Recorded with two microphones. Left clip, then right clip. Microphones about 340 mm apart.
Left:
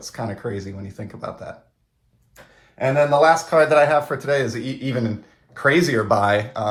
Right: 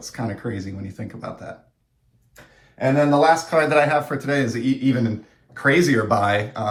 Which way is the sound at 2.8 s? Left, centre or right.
Centre.